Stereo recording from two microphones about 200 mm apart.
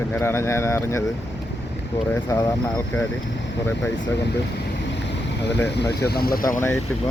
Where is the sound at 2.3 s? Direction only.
15° left (ahead or behind).